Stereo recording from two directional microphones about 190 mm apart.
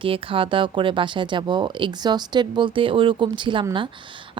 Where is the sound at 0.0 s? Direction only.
30° right (ahead or behind).